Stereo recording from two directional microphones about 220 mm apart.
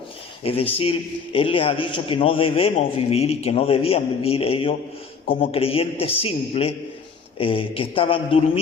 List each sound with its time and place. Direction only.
0.4 s a man's voice: 25° left (ahead or behind)